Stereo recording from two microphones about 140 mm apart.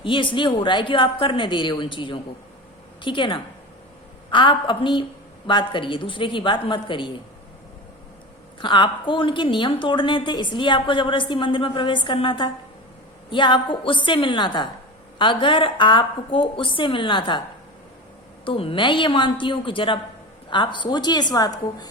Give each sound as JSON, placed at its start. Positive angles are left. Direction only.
{"t": 0.0, "sound": "a woman's voice", "side_deg": 35}
{"t": 8.6, "sound": "a woman's voice", "side_deg": 35}
{"t": 18.4, "sound": "a woman's voice", "side_deg": 40}